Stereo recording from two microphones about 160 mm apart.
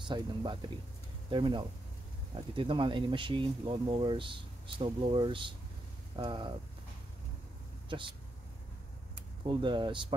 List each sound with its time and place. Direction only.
0.0 s speech: 30° right (ahead or behind)
9.5 s speech: 30° right (ahead or behind)